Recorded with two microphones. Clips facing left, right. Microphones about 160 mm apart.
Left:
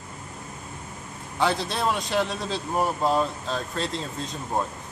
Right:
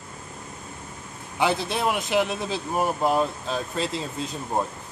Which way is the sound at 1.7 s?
15° right (ahead or behind).